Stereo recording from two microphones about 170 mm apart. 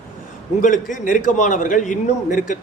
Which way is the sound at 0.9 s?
50° left (ahead or behind).